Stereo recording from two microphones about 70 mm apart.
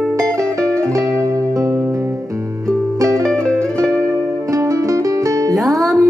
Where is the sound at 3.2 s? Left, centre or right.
Centre.